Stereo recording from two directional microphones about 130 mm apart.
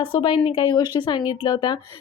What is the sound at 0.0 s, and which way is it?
A woman's voice, 40° left (ahead or behind).